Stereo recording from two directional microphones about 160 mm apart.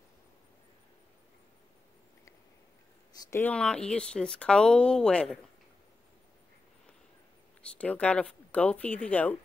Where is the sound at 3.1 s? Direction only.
25° left (ahead or behind).